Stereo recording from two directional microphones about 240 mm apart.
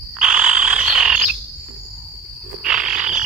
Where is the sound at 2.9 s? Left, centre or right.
Right.